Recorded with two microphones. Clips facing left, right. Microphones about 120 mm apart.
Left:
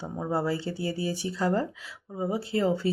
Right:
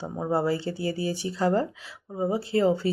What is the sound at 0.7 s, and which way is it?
Speech, 25° left (ahead or behind).